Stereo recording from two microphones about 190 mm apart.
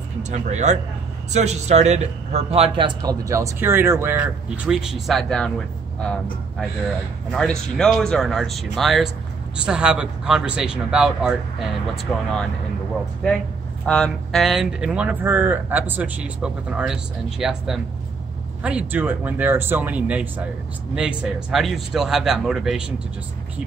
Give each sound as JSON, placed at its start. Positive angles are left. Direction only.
{"t": 0.2, "sound": "a man's voice", "side_deg": -40}
{"t": 7.2, "sound": "speech", "side_deg": 5}
{"t": 13.8, "sound": "a man's voice", "side_deg": 5}